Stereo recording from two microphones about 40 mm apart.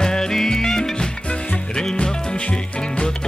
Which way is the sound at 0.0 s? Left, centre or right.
Centre.